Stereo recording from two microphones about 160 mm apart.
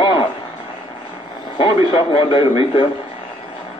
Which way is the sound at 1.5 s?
35° left (ahead or behind).